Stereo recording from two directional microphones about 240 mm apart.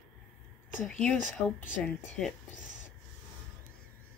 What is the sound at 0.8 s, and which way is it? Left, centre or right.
Speech, centre.